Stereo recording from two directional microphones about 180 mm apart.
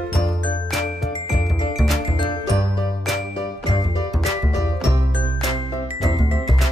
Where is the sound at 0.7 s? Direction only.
Centre (ahead or behind).